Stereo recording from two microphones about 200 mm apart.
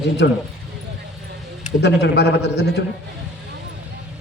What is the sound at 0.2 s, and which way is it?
Speech, 65° left (ahead or behind).